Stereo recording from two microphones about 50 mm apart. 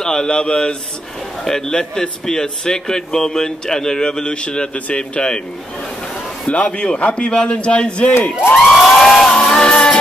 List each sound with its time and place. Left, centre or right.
0.0 s speech: centre
6.5 s a man's voice: left
8.6 s a sound: centre
9.4 s music: centre